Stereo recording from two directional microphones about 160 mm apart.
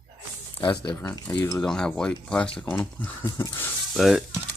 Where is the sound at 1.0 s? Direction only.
25° left (ahead or behind).